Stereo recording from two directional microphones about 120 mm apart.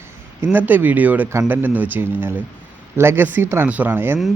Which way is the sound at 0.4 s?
15° right (ahead or behind).